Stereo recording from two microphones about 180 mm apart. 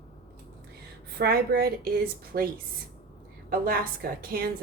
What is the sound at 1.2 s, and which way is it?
A woman's voice, 60° right (ahead or behind).